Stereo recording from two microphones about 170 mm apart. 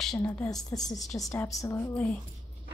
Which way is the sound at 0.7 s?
15° left (ahead or behind).